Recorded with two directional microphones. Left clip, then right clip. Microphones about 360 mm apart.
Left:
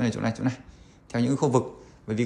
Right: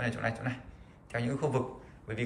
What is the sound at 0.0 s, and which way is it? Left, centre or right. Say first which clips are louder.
A man's voice: left 5 dB; centre.